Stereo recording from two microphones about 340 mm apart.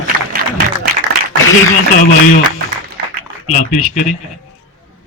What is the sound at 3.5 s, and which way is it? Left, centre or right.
Speech, left.